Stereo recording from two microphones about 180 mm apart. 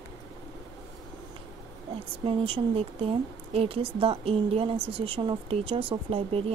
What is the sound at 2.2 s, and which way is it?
A woman's voice, 30° right (ahead or behind).